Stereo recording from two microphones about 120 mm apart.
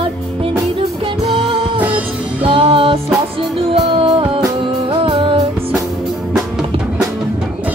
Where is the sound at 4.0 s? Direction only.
50° right (ahead or behind).